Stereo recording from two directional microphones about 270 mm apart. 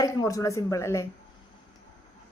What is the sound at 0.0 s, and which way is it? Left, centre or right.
A woman's voice, centre.